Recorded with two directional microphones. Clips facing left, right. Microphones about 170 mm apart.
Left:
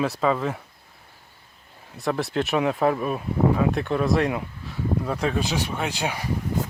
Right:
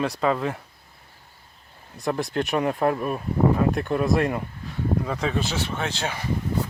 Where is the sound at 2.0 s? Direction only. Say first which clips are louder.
Left 1 dB; centre (ahead or behind).